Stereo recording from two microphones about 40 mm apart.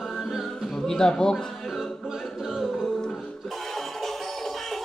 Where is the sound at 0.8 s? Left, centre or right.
Centre.